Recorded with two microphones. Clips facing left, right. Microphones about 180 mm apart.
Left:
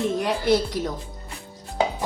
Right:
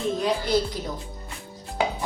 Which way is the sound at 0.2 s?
80° left.